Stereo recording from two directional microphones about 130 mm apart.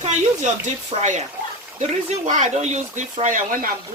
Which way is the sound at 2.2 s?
70° right (ahead or behind).